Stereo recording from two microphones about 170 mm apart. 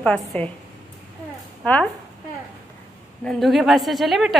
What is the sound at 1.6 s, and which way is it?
Speech, 10° left (ahead or behind).